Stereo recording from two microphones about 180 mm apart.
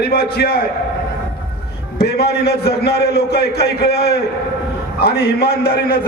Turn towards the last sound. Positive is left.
turn(degrees=60)  # may be behind; listen again after turning